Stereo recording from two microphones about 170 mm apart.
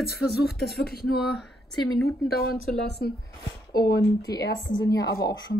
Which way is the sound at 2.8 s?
75° left (ahead or behind).